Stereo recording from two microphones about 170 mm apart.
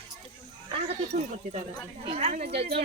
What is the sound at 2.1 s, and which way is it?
Speech, 35° right (ahead or behind).